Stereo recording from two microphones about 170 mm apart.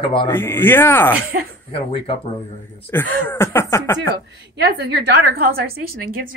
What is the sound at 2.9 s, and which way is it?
Speech, 10° left (ahead or behind).